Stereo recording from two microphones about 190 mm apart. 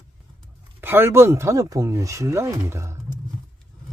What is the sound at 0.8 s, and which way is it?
Speech, 10° right (ahead or behind).